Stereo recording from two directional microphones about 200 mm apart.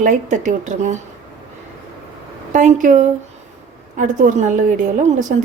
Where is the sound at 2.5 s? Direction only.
40° right (ahead or behind).